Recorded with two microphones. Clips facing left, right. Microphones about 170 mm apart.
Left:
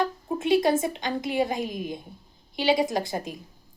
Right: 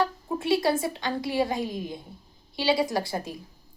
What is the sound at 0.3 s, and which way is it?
A woman's voice, 20° left (ahead or behind).